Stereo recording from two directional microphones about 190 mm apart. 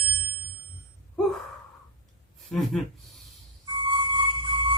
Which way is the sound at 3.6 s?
25° right (ahead or behind).